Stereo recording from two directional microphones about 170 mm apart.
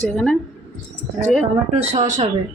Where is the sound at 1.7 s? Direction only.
40° right (ahead or behind).